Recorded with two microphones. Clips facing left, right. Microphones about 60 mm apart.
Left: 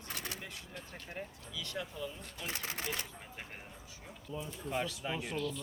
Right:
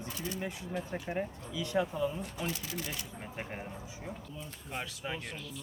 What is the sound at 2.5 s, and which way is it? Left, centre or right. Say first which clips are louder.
Speech: right 1 dB; left.